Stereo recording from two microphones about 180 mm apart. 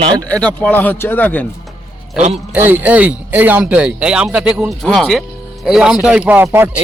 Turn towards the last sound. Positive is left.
turn(degrees=-10)  # may be behind; listen again after turning